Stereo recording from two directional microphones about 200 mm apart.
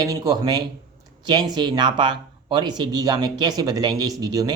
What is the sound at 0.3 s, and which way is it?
Speech, 20° right (ahead or behind).